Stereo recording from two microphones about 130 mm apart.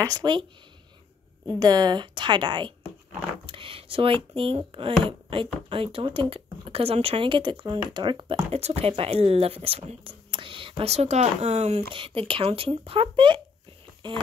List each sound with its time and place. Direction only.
0.0 s a woman's voice: 30° right (ahead or behind)
1.6 s a woman's voice: 30° right (ahead or behind)
8.5 s speech: 55° right (ahead or behind)
10.8 s speech: 55° right (ahead or behind)
11.9 s a woman's voice: 45° right (ahead or behind)